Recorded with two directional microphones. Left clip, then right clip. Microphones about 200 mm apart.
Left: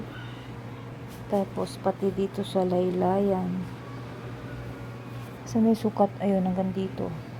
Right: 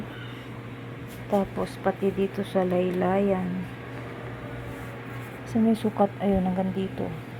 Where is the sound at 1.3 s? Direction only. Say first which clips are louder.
Right 2 dB; 15° right (ahead or behind).